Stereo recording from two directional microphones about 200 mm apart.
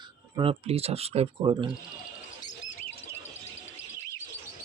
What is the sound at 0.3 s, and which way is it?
Speech, 30° right (ahead or behind).